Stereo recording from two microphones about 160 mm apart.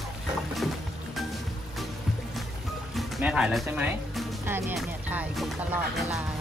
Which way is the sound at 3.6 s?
10° right (ahead or behind).